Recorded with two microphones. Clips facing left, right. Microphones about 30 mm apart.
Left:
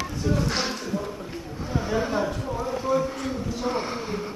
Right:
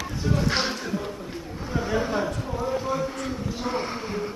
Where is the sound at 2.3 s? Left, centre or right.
Centre.